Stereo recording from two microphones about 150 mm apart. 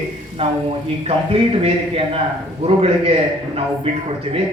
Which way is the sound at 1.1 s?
40° right (ahead or behind).